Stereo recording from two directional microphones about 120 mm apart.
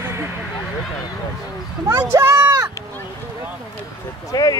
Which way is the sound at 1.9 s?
30° right (ahead or behind).